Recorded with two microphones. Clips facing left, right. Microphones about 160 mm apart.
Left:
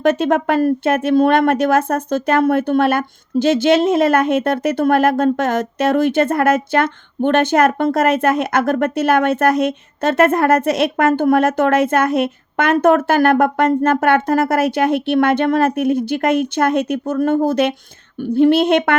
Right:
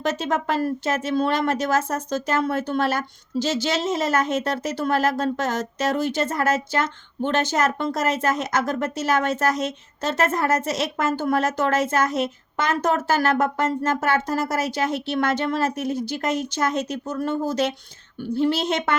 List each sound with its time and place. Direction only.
0.0 s a woman's voice: 60° left (ahead or behind)